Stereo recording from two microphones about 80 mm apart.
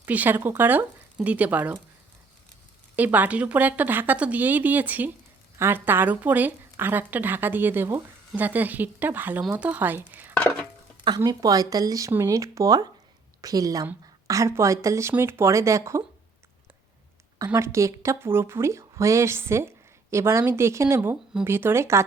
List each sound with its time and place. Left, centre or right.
0.0 s a woman's voice: right
2.9 s a woman's voice: right
11.3 s a woman's voice: right
17.3 s a woman's voice: right